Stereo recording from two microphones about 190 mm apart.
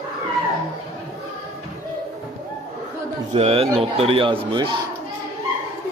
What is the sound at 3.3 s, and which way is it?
Speech, 30° right (ahead or behind).